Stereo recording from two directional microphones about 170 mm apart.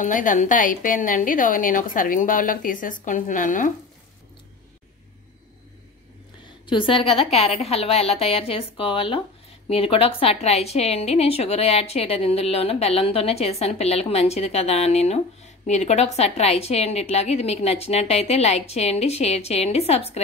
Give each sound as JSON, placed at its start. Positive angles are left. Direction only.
{"t": 0.0, "sound": "a woman's voice", "side_deg": 50}
{"t": 6.6, "sound": "a woman's voice", "side_deg": 30}